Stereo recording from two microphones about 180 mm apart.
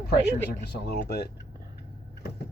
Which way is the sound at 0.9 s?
65° left (ahead or behind).